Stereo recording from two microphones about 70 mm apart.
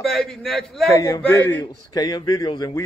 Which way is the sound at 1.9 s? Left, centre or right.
Left.